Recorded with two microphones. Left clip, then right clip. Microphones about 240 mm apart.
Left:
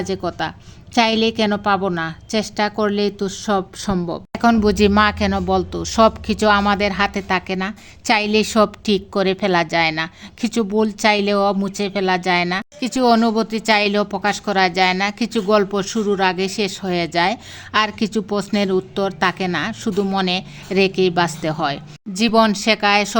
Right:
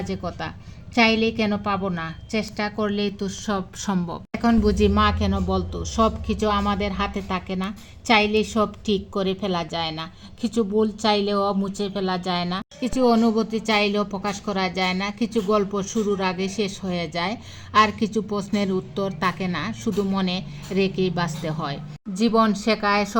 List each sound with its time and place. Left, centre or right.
0.0 s a woman's voice: left; by 4.2 s centre
4.3 s speech: left